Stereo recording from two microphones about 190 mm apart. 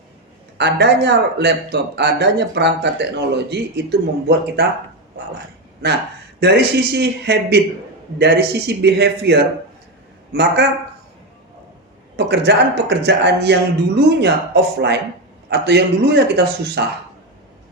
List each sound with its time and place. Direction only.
0.6 s a man's voice: 65° right (ahead or behind)
5.8 s a man's voice: 65° right (ahead or behind)
12.1 s a man's voice: 65° right (ahead or behind)